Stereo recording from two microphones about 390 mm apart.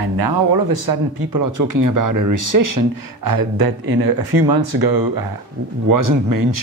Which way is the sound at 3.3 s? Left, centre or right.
Right.